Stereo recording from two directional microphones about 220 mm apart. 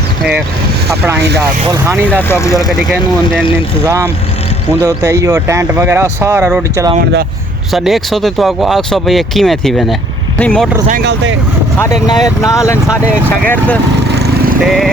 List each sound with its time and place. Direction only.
1.7 s speech: 10° right (ahead or behind)
2.3 s speech: 15° left (ahead or behind)
2.6 s speech: centre (ahead or behind)
3.8 s speech: 15° right (ahead or behind)
7.7 s speech: centre (ahead or behind)
11.0 s speech: 55° right (ahead or behind)
11.8 s speech: 15° left (ahead or behind)
14.2 s lawn mower: 45° right (ahead or behind)
14.6 s speech: centre (ahead or behind)